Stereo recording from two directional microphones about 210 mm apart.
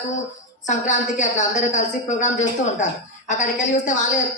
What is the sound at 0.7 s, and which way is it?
A man's voice, 35° left (ahead or behind).